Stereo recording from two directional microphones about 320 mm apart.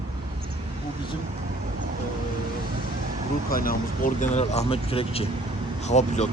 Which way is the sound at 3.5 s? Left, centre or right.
Left.